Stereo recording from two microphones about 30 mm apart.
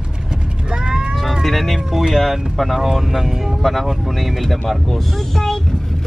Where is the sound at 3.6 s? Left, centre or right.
Centre.